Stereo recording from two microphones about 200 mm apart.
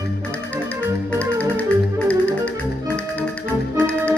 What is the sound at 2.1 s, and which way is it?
Music, 5° left (ahead or behind).